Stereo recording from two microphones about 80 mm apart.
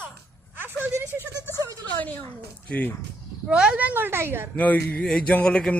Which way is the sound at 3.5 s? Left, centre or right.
Centre.